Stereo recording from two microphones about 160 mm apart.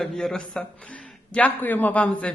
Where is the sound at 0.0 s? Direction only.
Centre (ahead or behind).